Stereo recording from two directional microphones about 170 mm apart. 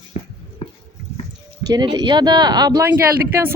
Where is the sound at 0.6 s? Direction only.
35° left (ahead or behind).